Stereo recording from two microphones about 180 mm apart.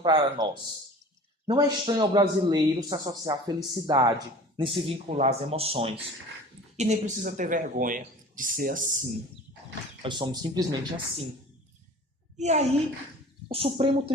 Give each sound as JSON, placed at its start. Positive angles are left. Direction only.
{"t": 0.0, "sound": "a man's voice", "side_deg": -25}
{"t": 10.0, "sound": "a man's voice", "side_deg": -25}
{"t": 12.4, "sound": "speech", "side_deg": -40}